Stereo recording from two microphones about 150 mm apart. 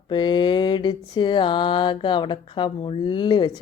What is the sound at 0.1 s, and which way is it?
A woman's voice, 30° left (ahead or behind).